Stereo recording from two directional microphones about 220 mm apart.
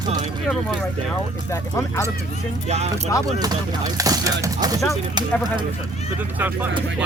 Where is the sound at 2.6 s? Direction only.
30° right (ahead or behind).